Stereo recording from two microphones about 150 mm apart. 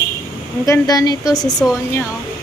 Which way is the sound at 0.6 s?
20° left (ahead or behind).